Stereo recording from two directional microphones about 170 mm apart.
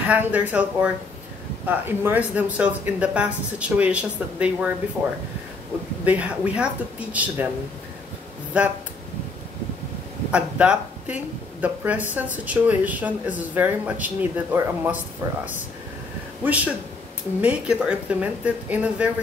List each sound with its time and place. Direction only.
0.0 s speech: 10° right (ahead or behind)
6.0 s speech: 10° right (ahead or behind)
8.5 s speech: 5° right (ahead or behind)
10.3 s speech: 5° right (ahead or behind)
16.4 s speech: 10° right (ahead or behind)